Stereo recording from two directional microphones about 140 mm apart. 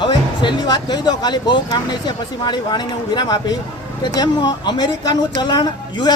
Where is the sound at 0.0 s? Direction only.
30° left (ahead or behind).